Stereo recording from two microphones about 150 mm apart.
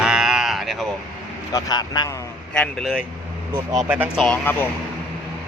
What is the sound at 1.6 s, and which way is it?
Speech, 25° left (ahead or behind).